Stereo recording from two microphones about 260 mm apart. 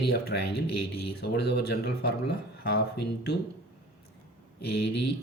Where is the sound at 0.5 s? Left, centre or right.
Left.